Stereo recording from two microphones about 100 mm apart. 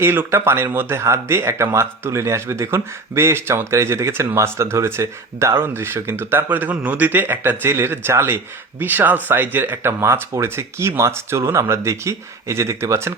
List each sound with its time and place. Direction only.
0.0 s speech: 25° right (ahead or behind)